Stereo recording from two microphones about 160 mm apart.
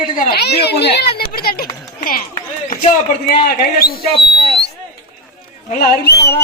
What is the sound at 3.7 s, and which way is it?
Speech, 70° left (ahead or behind).